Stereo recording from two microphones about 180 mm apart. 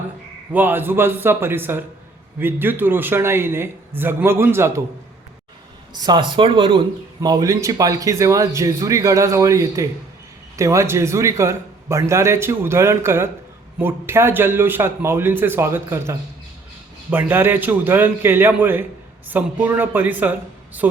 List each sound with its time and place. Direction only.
0.5 s a man's voice: 10° right (ahead or behind)
5.9 s a man's voice: 25° right (ahead or behind)